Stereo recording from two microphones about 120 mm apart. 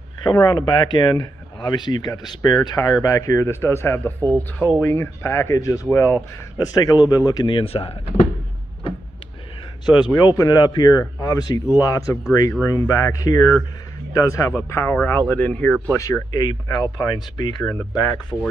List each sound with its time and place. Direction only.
0.2 s speech: 35° left (ahead or behind); by 8.3 s 55° left (ahead or behind)
9.8 s speech: 35° left (ahead or behind); by 15.7 s 10° left (ahead or behind)
15.9 s speech: 30° left (ahead or behind)